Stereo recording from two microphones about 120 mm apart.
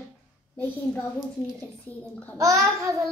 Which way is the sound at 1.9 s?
15° left (ahead or behind).